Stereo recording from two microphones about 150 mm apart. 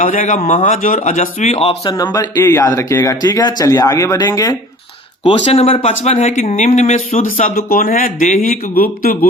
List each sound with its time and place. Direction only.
0.0 s speech: 55° left (ahead or behind)
1.8 s speech: 25° left (ahead or behind)
5.2 s speech: 40° left (ahead or behind)
7.5 s a man's voice: 75° left (ahead or behind)